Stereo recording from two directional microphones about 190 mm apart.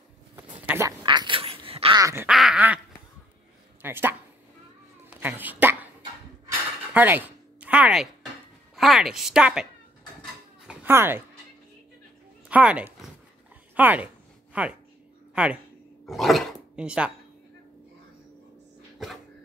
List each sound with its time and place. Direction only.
0.7 s quack: 15° right (ahead or behind)
1.0 s duck: 25° right (ahead or behind)
2.0 s quack: 15° right (ahead or behind)
2.2 s quack: 5° right (ahead or behind)
3.8 s speech: 10° right (ahead or behind)
5.2 s speech: 10° right (ahead or behind)
6.9 s a sound: 10° right (ahead or behind)
8.7 s speech: centre (ahead or behind)
10.7 s cat: 10° right (ahead or behind)
12.4 s speech: 5° right (ahead or behind)
13.7 s a sound: 10° right (ahead or behind)
15.3 s speech: 5° right (ahead or behind)
16.1 s dog: centre (ahead or behind)
16.7 s speech: 5° right (ahead or behind)